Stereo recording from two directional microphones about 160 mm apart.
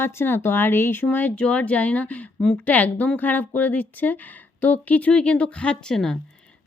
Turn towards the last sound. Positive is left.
turn(degrees=5)  # may be behind; listen again after turning